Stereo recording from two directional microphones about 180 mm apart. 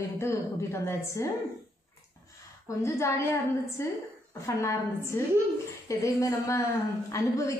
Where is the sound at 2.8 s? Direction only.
15° left (ahead or behind).